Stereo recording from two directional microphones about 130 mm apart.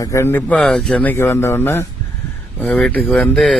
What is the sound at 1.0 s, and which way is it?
Speech, 20° left (ahead or behind).